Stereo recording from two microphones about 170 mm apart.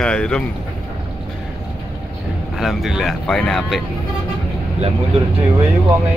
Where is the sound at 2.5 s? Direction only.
Centre (ahead or behind).